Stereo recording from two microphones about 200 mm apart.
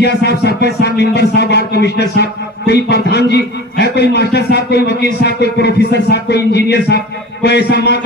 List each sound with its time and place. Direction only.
0.0 s a man's voice: 55° left (ahead or behind)